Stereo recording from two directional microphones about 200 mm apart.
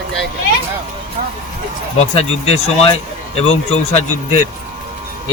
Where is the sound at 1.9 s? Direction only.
30° left (ahead or behind).